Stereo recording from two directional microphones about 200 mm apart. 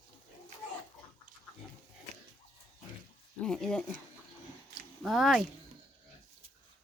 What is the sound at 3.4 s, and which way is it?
Speech, 5° left (ahead or behind).